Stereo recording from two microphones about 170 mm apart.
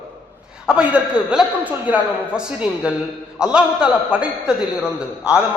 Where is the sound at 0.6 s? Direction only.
5° right (ahead or behind).